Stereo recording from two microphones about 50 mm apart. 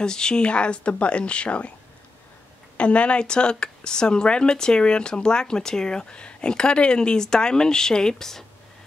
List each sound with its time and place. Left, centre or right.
0.0 s speech: centre
2.8 s a woman's voice: left